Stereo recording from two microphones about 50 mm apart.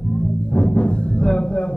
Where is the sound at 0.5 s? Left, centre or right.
Left.